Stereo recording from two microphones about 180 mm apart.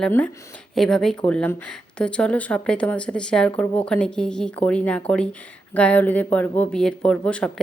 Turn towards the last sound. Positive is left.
turn(degrees=5)  # may be behind; listen again after turning